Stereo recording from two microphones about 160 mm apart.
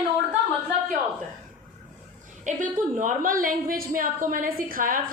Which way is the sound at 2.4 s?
55° right (ahead or behind).